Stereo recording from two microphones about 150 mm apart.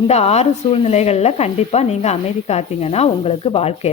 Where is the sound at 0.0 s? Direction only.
45° left (ahead or behind).